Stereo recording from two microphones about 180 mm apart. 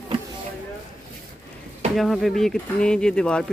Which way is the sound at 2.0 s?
Centre (ahead or behind).